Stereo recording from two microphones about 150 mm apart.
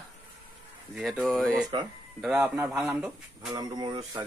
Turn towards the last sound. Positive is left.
turn(degrees=-30)  # may be behind; listen again after turning